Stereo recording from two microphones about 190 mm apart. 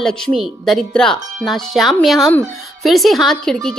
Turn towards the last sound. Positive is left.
turn(degrees=5)  # may be behind; listen again after turning